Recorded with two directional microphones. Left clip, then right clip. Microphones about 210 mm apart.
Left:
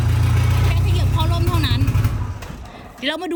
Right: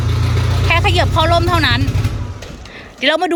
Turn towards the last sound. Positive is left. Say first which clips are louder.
# right 9 dB
turn(degrees=5)  # may be behind; listen again after turning